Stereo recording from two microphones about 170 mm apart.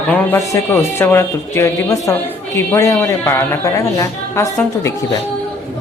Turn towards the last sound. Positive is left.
turn(degrees=15)  # may be behind; listen again after turning